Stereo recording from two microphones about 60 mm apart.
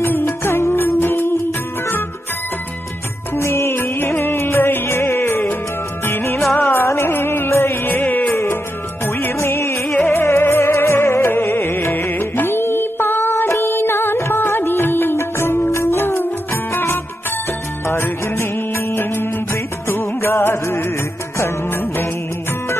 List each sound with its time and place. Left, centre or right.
0.0 s music: left
3.3 s music: left
7.9 s music: left
9.4 s music: left
9.9 s music: left